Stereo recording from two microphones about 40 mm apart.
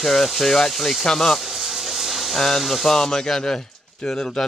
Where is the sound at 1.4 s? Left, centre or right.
Centre.